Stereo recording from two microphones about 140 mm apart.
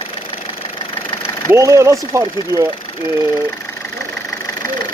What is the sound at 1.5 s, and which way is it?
Speech, 20° right (ahead or behind).